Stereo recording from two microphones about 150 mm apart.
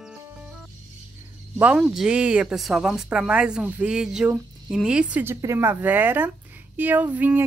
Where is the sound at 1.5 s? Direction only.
5° right (ahead or behind).